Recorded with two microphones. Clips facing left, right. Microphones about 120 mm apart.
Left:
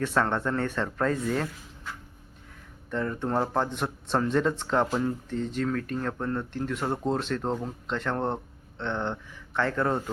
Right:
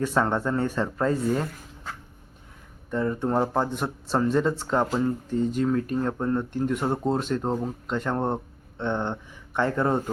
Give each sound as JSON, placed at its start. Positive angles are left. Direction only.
{"t": 0.0, "sound": "speech", "side_deg": -10}
{"t": 2.9, "sound": "speech", "side_deg": -10}